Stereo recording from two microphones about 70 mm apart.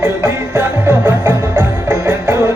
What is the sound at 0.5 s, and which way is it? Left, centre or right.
Music, right.